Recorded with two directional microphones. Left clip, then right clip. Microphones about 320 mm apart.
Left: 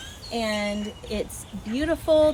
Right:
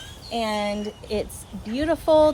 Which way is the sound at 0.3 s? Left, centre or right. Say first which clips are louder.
Right 2 dB; centre.